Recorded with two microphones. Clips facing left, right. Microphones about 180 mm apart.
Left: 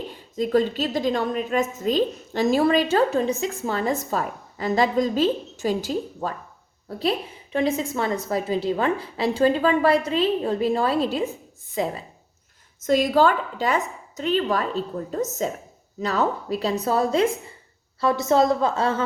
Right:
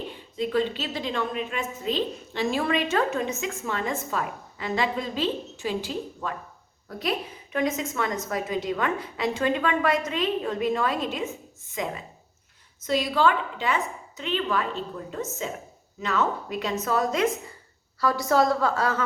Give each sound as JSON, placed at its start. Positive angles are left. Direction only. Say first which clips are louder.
{"t": 0.1, "sound": "a woman's voice", "louder": "left 6 dB", "side_deg": 40}
{"t": 12.8, "sound": "a woman's voice", "louder": "left 5 dB", "side_deg": 45}